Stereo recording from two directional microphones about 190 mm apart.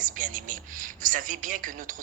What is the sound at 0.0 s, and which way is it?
Speech, 45° right (ahead or behind).